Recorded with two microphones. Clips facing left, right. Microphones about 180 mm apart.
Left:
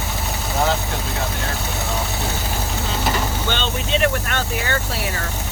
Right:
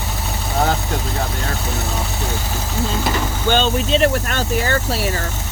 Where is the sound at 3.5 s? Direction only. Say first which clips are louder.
Right 9 dB; 40° right (ahead or behind).